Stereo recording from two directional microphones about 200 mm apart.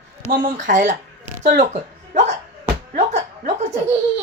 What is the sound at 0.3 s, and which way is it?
Speech, 45° right (ahead or behind).